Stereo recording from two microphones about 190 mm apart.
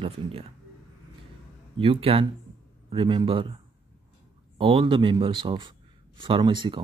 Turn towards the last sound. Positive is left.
turn(degrees=-25)  # may be behind; listen again after turning